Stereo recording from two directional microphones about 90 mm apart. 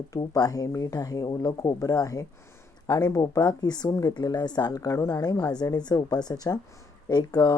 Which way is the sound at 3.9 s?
35° left (ahead or behind).